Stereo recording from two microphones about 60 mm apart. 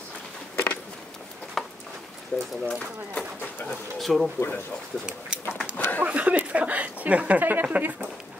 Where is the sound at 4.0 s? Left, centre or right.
Centre.